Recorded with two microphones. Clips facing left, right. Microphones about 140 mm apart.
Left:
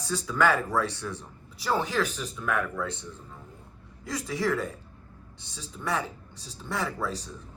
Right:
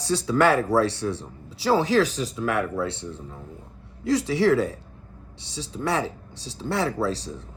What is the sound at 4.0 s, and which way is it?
Speech, 70° right (ahead or behind).